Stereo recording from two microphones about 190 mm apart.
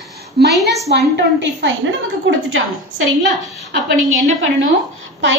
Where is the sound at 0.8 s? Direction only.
65° right (ahead or behind).